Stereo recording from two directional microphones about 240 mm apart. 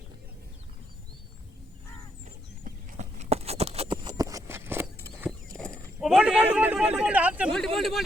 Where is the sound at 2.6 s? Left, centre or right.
Right; by 4.9 s centre.